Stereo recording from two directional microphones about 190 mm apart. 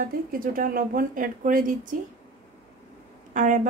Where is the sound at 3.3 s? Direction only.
40° right (ahead or behind).